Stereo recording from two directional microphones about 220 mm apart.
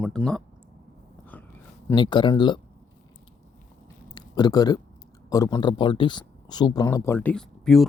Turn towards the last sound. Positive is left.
turn(degrees=0)  # may be behind; listen again after turning